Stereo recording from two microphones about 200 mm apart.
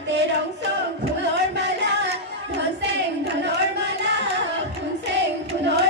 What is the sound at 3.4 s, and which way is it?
Music, 60° right (ahead or behind).